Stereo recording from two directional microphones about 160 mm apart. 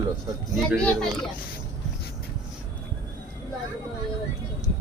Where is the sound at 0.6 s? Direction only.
5° left (ahead or behind).